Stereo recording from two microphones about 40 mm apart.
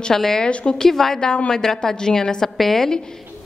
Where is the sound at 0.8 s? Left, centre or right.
Centre.